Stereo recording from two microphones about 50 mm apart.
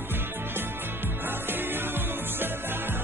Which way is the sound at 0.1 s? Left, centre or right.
Right.